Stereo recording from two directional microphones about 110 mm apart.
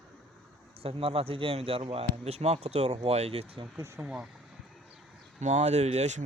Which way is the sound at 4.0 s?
10° right (ahead or behind).